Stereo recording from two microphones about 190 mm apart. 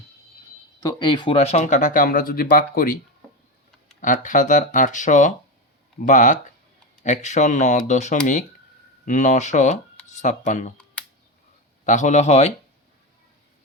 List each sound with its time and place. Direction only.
0.8 s speech: 20° left (ahead or behind); by 3.0 s 50° left (ahead or behind)
4.0 s speech: 40° left (ahead or behind)
11.9 s speech: 40° left (ahead or behind)